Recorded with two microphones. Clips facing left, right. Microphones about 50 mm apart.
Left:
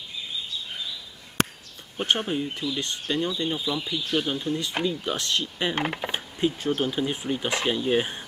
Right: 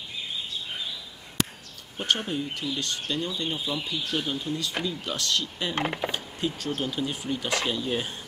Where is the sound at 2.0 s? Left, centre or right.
Centre.